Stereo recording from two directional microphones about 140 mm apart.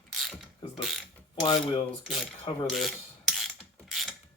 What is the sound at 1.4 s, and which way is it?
Speech, 40° left (ahead or behind).